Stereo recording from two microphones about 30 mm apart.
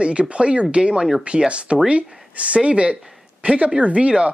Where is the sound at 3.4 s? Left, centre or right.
Right.